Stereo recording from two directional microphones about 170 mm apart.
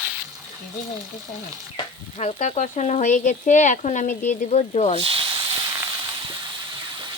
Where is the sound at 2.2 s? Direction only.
40° left (ahead or behind).